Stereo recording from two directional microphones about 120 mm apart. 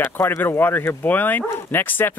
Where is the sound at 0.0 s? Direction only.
20° left (ahead or behind).